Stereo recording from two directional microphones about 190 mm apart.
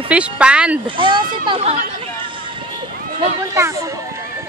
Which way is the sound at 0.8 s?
25° right (ahead or behind).